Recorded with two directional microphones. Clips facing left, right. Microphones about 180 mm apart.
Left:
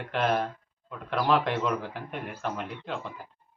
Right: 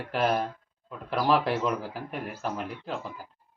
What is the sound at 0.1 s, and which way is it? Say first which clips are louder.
Speech: even; 5° right (ahead or behind).